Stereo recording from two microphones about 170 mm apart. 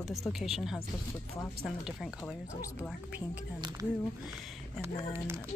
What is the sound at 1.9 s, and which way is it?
Speech, 5° right (ahead or behind).